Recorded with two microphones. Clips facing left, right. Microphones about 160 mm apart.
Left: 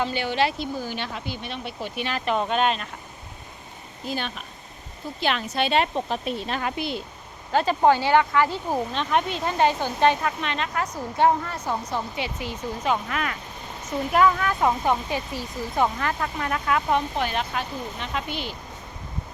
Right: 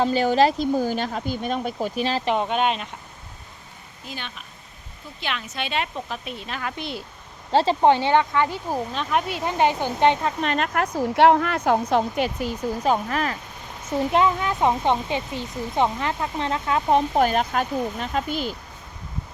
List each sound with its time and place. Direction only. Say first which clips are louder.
0.0 s speech: right 6 dB; 40° right (ahead or behind)
2.3 s speech: left 2 dB; 15° right (ahead or behind)
4.1 s a woman's voice: left 6 dB; 40° left (ahead or behind)
6.7 s speech: left 3 dB; centre (ahead or behind)
7.5 s speech: right 2 dB; 25° right (ahead or behind)
8.9 s speech: even; 5° right (ahead or behind); by 10.3 s 20° right (ahead or behind)
10.4 s speech: right 5 dB; 45° right (ahead or behind)
11.1 s a woman's voice: right 4 dB; 75° right (ahead or behind)
12.1 s speech: right 6 dB; 45° right (ahead or behind)
13.9 s speech: even; 25° right (ahead or behind)
17.2 s speech: right 6 dB; 45° right (ahead or behind)